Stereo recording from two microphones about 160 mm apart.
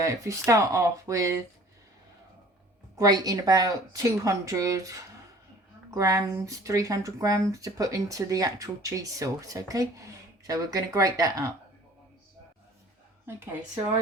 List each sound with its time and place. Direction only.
0.0 s speech: 20° right (ahead or behind)
2.9 s speech: 25° right (ahead or behind)